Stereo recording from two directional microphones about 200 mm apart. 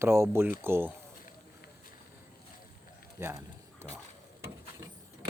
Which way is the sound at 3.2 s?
10° right (ahead or behind).